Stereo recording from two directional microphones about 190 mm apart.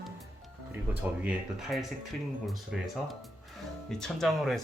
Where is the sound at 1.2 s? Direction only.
5° right (ahead or behind).